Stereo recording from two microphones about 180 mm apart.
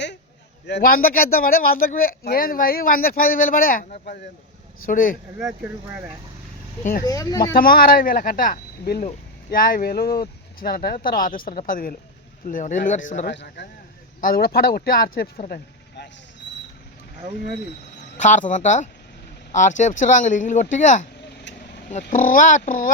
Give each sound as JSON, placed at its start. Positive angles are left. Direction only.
{"t": 0.7, "sound": "speech", "side_deg": 55}
{"t": 5.4, "sound": "speech", "side_deg": -5}
{"t": 7.0, "sound": "speech", "side_deg": 20}
{"t": 7.5, "sound": "speech", "side_deg": 55}
{"t": 13.2, "sound": "a man's voice", "side_deg": 70}
{"t": 14.2, "sound": "speech", "side_deg": 55}
{"t": 15.4, "sound": "cricket", "side_deg": 55}
{"t": 18.2, "sound": "speech", "side_deg": 45}